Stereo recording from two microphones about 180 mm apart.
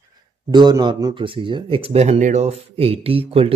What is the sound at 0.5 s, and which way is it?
Speech, 25° right (ahead or behind).